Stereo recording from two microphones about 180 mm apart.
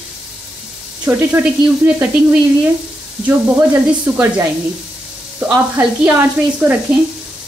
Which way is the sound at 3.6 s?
10° right (ahead or behind).